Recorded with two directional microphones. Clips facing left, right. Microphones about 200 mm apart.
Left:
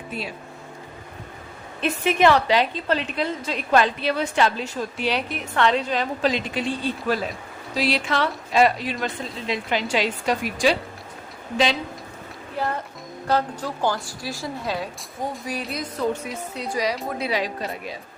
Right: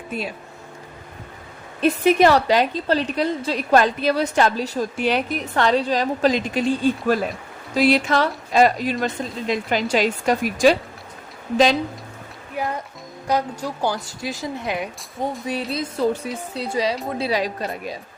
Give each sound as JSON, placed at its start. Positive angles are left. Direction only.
{"t": 1.8, "sound": "a woman's voice", "side_deg": -40}
{"t": 12.6, "sound": "a woman's voice", "side_deg": -10}
{"t": 17.2, "sound": "a woman's voice", "side_deg": -35}